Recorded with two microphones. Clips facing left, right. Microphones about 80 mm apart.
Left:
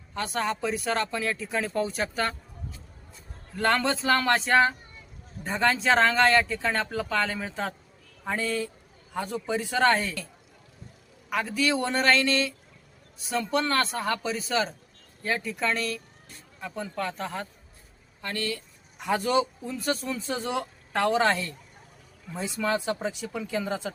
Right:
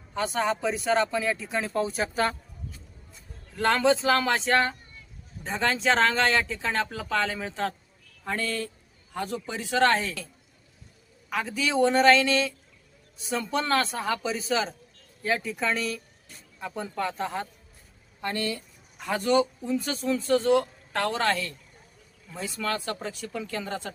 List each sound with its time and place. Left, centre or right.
0.1 s speech: centre
3.5 s speech: centre
11.3 s speech: centre
18.2 s speech: right
18.9 s speech: centre
19.6 s speech: centre
21.2 s speech: left; by 23.9 s centre